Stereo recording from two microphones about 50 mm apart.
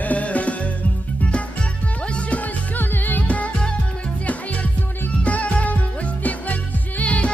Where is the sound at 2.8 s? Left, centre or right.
Left.